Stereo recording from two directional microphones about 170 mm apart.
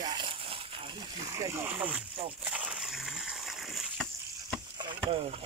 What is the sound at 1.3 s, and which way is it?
Speech, 20° right (ahead or behind).